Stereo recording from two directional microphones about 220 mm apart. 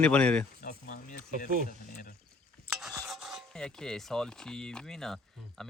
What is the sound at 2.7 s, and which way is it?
Stir, centre (ahead or behind).